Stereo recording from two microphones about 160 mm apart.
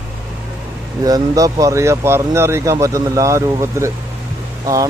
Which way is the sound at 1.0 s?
25° right (ahead or behind).